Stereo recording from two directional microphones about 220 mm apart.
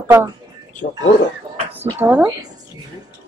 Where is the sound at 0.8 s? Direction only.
40° left (ahead or behind).